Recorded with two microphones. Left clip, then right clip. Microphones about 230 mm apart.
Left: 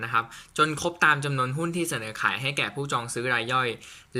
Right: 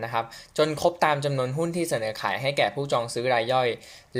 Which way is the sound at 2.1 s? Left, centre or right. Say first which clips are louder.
Left 3 dB; left.